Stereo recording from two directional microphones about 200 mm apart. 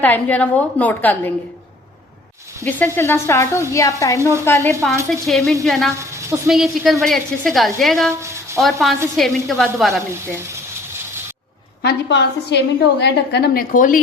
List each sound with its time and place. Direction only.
0.0 s a woman's voice: 10° left (ahead or behind)
2.6 s a woman's voice: 10° left (ahead or behind)
5.2 s a woman's voice: centre (ahead or behind)
6.0 s a sound: 15° right (ahead or behind)
6.5 s a woman's voice: centre (ahead or behind)
8.2 s a sound: 15° right (ahead or behind)
8.6 s a woman's voice: centre (ahead or behind)
10.1 s frying: 15° right (ahead or behind)
11.8 s a woman's voice: 55° left (ahead or behind)